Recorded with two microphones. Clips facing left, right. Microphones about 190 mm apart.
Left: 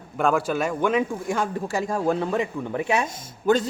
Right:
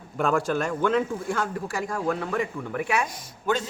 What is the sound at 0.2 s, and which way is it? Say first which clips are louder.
Speech: left 2 dB; centre (ahead or behind).